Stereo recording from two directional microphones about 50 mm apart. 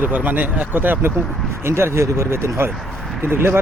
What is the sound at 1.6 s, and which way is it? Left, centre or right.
Speech, right.